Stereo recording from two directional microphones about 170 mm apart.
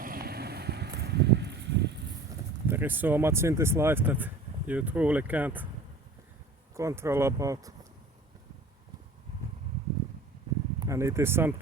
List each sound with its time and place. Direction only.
0.0 s a sound: 60° right (ahead or behind); by 1.9 s 90° right
2.6 s speech: 10° right (ahead or behind)
6.7 s speech: 15° right (ahead or behind)
10.8 s speech: 20° right (ahead or behind)